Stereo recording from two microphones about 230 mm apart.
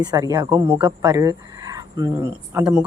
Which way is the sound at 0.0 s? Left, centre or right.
Centre.